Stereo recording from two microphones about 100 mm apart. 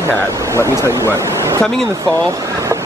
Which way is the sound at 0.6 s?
30° right (ahead or behind).